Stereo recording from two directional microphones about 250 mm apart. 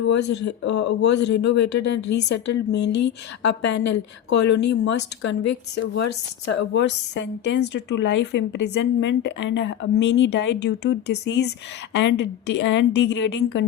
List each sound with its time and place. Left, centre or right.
0.0 s a woman's voice: left
0.3 s a woman's voice: left
0.6 s a woman's voice: left
2.0 s a woman's voice: left
2.3 s a woman's voice: left
2.8 s a woman's voice: left
3.8 s a woman's voice: left
5.7 s a woman's voice: left
6.5 s a woman's voice: left